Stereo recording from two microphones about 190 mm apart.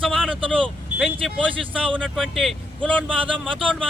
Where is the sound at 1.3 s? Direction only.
30° right (ahead or behind).